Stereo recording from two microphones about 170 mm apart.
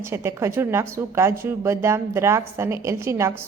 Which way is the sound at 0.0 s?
15° right (ahead or behind).